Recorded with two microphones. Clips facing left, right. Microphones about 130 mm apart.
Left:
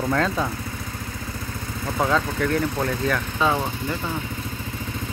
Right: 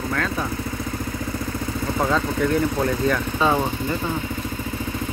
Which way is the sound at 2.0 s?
5° right (ahead or behind).